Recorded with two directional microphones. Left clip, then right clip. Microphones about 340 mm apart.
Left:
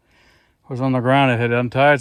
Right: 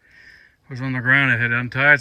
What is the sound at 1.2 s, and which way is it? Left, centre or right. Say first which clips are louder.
Speech: left 1 dB; centre.